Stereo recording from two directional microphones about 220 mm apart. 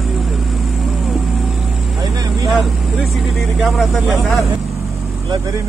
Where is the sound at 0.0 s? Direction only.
Centre (ahead or behind).